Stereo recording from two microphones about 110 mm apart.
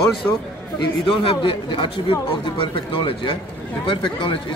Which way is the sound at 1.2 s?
50° left (ahead or behind).